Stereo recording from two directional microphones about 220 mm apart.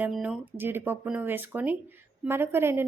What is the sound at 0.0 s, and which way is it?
A woman's voice, 5° right (ahead or behind).